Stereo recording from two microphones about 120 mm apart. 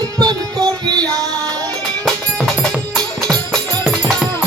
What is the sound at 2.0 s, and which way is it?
Music, centre (ahead or behind).